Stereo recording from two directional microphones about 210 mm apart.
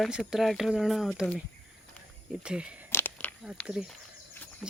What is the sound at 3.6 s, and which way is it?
Speech, 5° left (ahead or behind).